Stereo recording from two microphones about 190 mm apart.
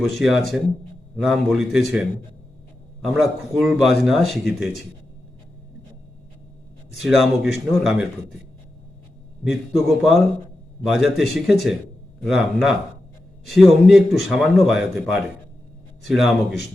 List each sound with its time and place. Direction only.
0.0 s a man's voice: centre (ahead or behind)
6.9 s a man's voice: centre (ahead or behind)
9.4 s a man's voice: centre (ahead or behind)